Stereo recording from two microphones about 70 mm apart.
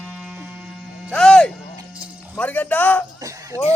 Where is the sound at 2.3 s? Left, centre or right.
Left.